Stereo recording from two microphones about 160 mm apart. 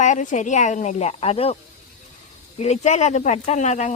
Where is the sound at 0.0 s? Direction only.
50° left (ahead or behind).